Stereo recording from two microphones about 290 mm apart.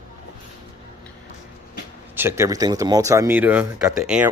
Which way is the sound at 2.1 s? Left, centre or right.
Centre.